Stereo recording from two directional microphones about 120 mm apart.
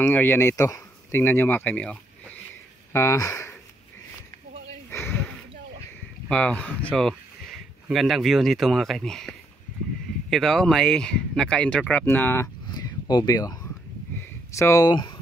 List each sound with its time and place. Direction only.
0.0 s speech: 20° left (ahead or behind)
1.2 s speech: 15° left (ahead or behind)
2.9 s speech: 25° left (ahead or behind)
4.8 s a sound: 20° left (ahead or behind)
6.2 s speech: 10° left (ahead or behind)
10.3 s speech: centre (ahead or behind); by 12.4 s 20° left (ahead or behind)
12.6 s a sound: 35° left (ahead or behind)